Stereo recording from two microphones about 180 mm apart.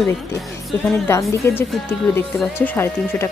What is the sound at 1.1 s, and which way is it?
Speech, 15° left (ahead or behind).